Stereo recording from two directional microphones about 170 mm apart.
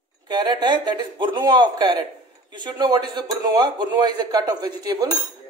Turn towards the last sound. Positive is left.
turn(degrees=-25)  # may be behind; listen again after turning